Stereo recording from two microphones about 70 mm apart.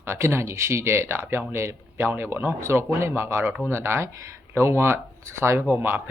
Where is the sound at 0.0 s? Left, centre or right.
Right.